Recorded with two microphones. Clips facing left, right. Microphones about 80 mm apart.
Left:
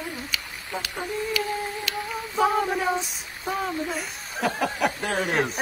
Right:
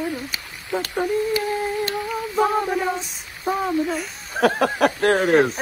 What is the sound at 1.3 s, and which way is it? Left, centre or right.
Humming, right.